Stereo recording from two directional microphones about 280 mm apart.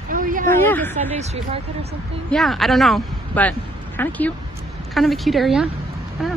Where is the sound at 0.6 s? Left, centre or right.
Centre.